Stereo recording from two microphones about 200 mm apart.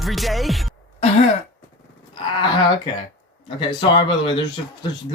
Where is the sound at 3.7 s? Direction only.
25° left (ahead or behind).